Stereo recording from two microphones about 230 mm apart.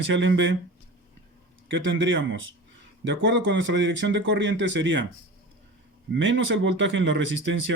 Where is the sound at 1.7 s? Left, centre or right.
Right.